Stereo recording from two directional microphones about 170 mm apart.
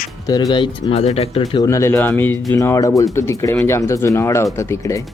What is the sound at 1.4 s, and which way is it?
Speech, 20° left (ahead or behind).